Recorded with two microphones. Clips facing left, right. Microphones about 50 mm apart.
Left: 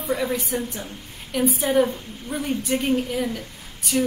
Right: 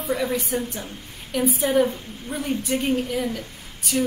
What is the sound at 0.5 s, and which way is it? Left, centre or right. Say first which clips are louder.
Speech: right 1 dB; right.